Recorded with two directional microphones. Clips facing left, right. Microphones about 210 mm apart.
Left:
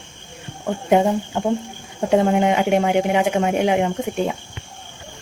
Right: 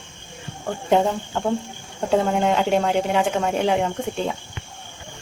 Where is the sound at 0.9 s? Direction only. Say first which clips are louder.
Left 3 dB; 15° left (ahead or behind).